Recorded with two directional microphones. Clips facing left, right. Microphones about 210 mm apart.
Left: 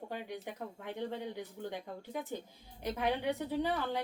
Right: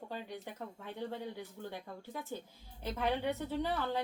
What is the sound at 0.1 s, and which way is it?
A woman's voice, 15° left (ahead or behind).